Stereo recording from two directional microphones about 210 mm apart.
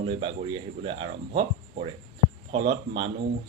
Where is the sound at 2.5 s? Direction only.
25° right (ahead or behind).